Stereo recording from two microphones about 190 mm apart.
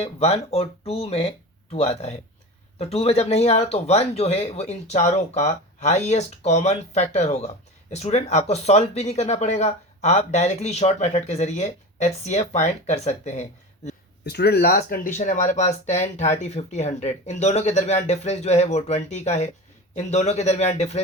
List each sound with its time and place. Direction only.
0.0 s speech: 35° left (ahead or behind)
14.3 s speech: 60° left (ahead or behind); by 21.0 s 35° left (ahead or behind)